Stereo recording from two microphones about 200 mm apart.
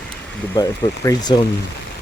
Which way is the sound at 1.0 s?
20° left (ahead or behind).